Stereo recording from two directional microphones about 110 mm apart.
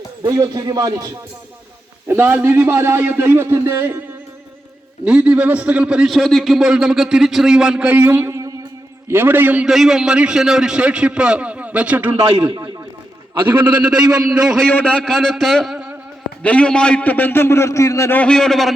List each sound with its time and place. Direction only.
0.3 s speech: 30° right (ahead or behind)
2.0 s a man's voice: 20° right (ahead or behind)
5.0 s a man's voice: 10° right (ahead or behind)
9.6 s a man's voice: centre (ahead or behind)
13.4 s a man's voice: 45° right (ahead or behind)
13.8 s a man's voice: 10° right (ahead or behind)
14.7 s a man's voice: 15° left (ahead or behind); by 15.9 s centre (ahead or behind)
16.4 s a man's voice: 10° left (ahead or behind)
18.2 s a man's voice: 5° left (ahead or behind)